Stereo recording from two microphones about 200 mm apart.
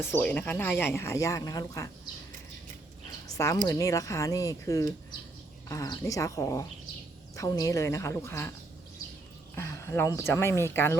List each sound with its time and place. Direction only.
0.0 s speech: 10° left (ahead or behind)
3.2 s a sound: 15° left (ahead or behind)
3.7 s speech: 15° left (ahead or behind)
9.6 s speech: 15° left (ahead or behind)